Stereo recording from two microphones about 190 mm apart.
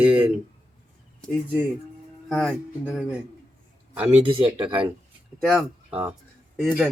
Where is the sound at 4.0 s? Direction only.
25° right (ahead or behind).